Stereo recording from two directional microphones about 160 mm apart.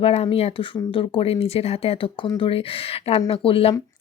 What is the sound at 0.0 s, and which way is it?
A woman's voice, 40° left (ahead or behind).